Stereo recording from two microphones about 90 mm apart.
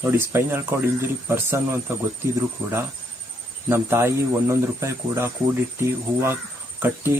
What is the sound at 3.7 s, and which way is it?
Speech, 30° right (ahead or behind).